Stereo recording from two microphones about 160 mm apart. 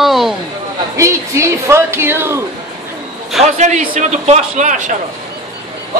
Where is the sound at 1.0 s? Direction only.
20° right (ahead or behind).